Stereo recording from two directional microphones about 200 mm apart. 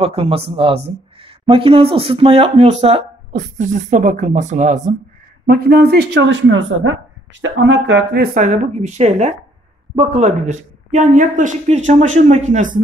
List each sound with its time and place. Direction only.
0.0 s speech: 30° right (ahead or behind)
5.5 s speech: 50° right (ahead or behind)
8.4 s speech: 35° right (ahead or behind)